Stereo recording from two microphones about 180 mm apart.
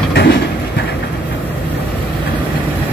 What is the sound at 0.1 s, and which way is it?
Vehicle, 65° left (ahead or behind).